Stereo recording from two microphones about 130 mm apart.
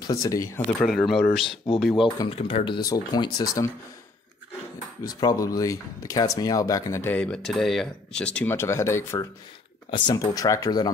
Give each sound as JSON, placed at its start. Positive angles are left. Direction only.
{"t": 0.0, "sound": "speech", "side_deg": 30}
{"t": 0.8, "sound": "speech", "side_deg": 0}
{"t": 2.0, "sound": "speech", "side_deg": 40}
{"t": 2.9, "sound": "speech", "side_deg": 30}
{"t": 5.2, "sound": "speech", "side_deg": 30}
{"t": 9.8, "sound": "speech", "side_deg": 40}
{"t": 10.1, "sound": "speech", "side_deg": 25}